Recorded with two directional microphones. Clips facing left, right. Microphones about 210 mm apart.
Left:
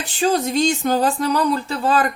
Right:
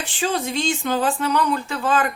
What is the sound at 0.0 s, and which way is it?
Speech, 40° left (ahead or behind).